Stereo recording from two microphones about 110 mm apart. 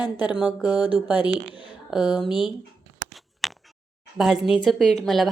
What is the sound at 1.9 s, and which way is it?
Speech, 5° right (ahead or behind).